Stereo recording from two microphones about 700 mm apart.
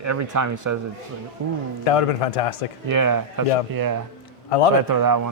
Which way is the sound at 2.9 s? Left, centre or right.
Right.